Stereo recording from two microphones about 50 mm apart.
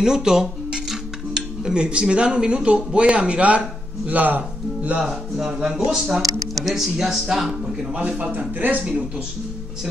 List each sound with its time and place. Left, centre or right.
0.0 s dishes: centre
1.6 s speech: centre
5.7 s speech: centre
7.9 s speech: right
8.4 s speech: right